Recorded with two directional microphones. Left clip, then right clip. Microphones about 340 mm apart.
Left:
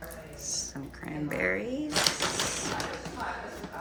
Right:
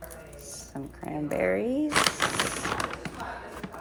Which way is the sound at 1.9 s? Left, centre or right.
Right.